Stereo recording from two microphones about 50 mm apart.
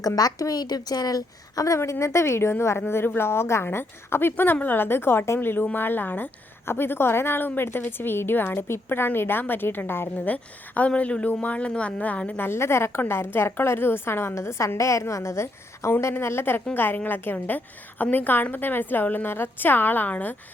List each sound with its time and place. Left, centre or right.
1.6 s a woman's voice: left
6.7 s a woman's voice: left
10.2 s a woman's voice: left
12.4 s a woman's voice: left
14.3 s a woman's voice: left
16.1 s a woman's voice: left